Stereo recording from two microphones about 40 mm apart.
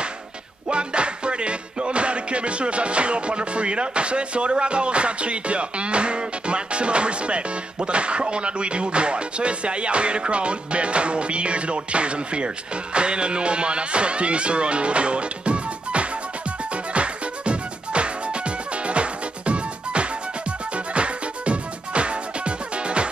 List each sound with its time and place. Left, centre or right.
0.7 s music: right
12.9 s speech: right
16.7 s music: right